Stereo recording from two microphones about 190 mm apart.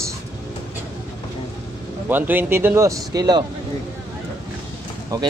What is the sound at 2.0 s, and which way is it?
Speech, 10° right (ahead or behind).